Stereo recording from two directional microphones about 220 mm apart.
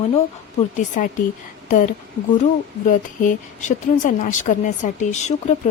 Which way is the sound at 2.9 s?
35° left (ahead or behind).